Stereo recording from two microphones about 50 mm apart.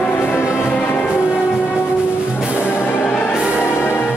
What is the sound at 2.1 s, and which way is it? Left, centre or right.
Music, left.